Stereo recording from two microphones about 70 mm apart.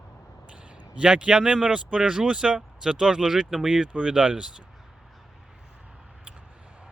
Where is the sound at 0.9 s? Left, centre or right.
Centre.